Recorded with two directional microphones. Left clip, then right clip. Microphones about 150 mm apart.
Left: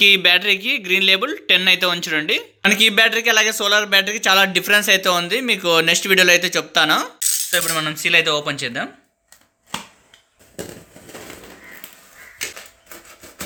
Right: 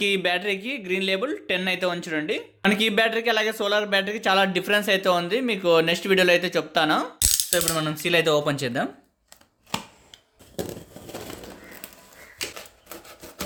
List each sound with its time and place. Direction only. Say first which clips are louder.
0.0 s speech: left 10 dB; centre (ahead or behind)
7.5 s speech: left 4 dB; 30° right (ahead or behind); by 8.9 s 50° right (ahead or behind)